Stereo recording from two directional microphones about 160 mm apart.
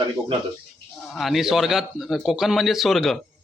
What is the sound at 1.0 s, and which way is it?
A man's voice, centre (ahead or behind).